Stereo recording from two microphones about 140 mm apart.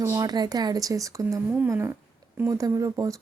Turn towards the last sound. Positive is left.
turn(degrees=-25)  # may be behind; listen again after turning